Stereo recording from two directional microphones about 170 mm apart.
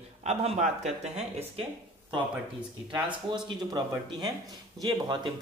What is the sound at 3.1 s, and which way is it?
Speech, 30° right (ahead or behind).